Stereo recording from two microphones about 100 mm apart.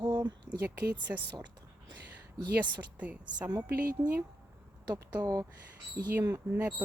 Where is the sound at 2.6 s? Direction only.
15° right (ahead or behind).